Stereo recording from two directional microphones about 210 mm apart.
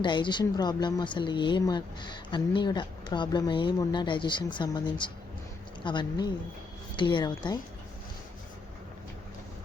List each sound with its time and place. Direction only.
0.0 s speech: 20° left (ahead or behind)